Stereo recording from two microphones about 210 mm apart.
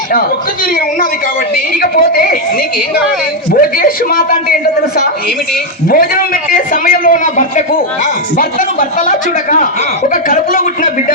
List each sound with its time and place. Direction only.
0.6 s a man's voice: 45° left (ahead or behind)